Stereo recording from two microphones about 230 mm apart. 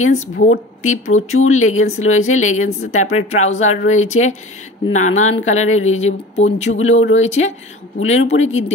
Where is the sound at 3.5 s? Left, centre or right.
Left.